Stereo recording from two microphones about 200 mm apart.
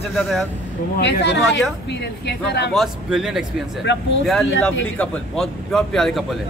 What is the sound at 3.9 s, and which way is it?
Speech, 60° left (ahead or behind).